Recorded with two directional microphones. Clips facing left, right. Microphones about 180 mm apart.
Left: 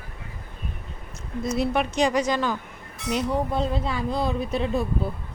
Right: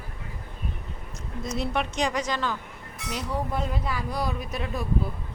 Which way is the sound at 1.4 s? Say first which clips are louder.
Left 5 dB; 5° left (ahead or behind).